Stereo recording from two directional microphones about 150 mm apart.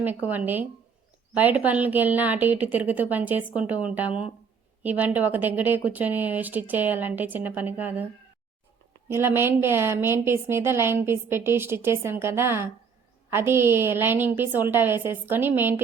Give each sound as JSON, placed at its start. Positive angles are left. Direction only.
{"t": 0.0, "sound": "a woman's voice", "side_deg": -10}
{"t": 9.0, "sound": "a woman's voice", "side_deg": -15}